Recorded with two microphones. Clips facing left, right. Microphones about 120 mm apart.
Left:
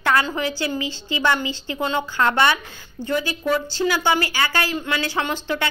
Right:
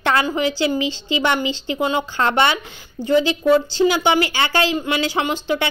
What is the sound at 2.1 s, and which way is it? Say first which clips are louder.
A woman's voice: even; 25° right (ahead or behind).